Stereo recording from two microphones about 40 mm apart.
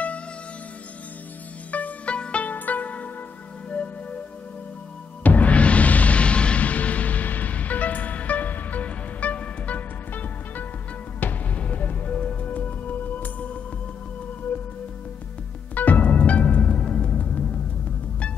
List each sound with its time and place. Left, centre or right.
1.7 s music: left
2.1 s music: left
2.4 s music: left
5.2 s music: left
11.5 s music: left
12.2 s music: left
12.4 s music: left
15.7 s music: left
16.8 s music: left
17.1 s music: left